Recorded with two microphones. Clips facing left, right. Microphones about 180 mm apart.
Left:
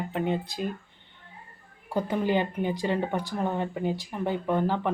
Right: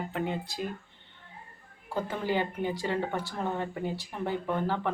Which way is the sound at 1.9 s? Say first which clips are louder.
Left 4 dB; 15° left (ahead or behind).